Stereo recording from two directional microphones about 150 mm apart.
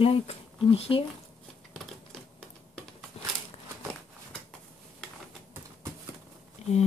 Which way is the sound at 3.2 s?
40° left (ahead or behind).